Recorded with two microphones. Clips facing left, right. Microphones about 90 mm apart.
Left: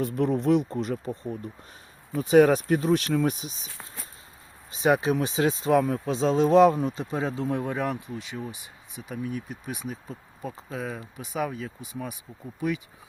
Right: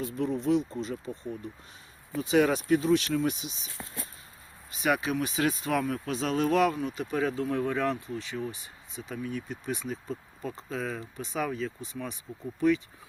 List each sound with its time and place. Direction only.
0.0 s speech: 60° left (ahead or behind)
2.1 s speech: 45° left (ahead or behind)
4.7 s speech: 30° left (ahead or behind)
6.7 s speech: 35° left (ahead or behind)
7.0 s speech: 25° left (ahead or behind)